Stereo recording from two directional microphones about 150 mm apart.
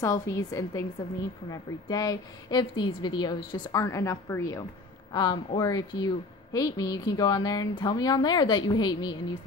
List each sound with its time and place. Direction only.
0.0 s a woman's voice: 20° left (ahead or behind)